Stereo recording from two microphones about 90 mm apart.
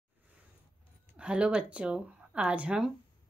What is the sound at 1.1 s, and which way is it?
Speech, 10° right (ahead or behind).